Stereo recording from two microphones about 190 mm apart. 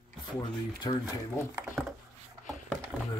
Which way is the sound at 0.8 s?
25° left (ahead or behind).